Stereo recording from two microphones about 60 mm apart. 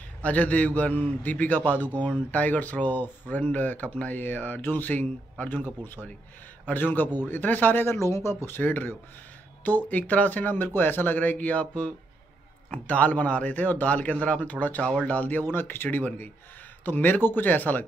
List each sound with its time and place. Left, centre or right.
0.2 s a man's voice: left
14.8 s speech: centre
15.0 s speech: left